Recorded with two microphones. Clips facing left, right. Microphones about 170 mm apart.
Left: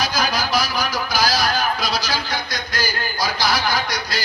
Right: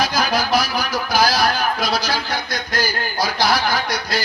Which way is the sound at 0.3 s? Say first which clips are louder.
Right 3 dB; 55° right (ahead or behind).